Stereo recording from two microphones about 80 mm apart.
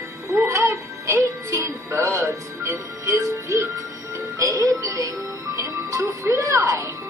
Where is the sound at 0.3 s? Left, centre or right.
Right.